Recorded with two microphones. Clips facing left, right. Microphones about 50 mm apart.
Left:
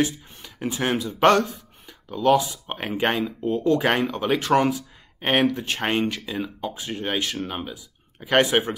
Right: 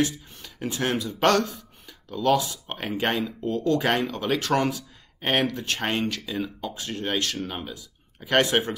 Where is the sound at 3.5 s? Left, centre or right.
Centre.